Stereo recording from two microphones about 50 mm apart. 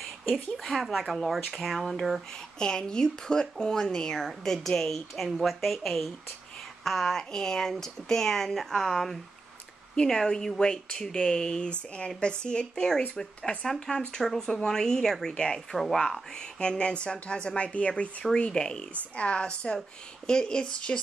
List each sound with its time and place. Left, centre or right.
0.0 s speech: centre
2.6 s speech: centre
18.2 s speech: centre